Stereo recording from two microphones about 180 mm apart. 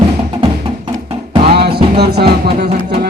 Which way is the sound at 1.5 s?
65° right (ahead or behind).